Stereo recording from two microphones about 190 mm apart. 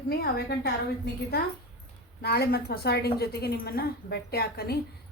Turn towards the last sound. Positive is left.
turn(degrees=55)  # may be behind; listen again after turning